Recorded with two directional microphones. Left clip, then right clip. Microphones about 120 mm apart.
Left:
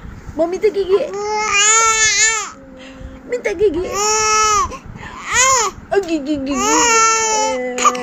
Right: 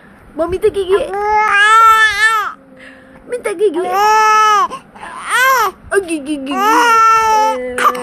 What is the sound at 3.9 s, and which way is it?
Baby cry, 85° right.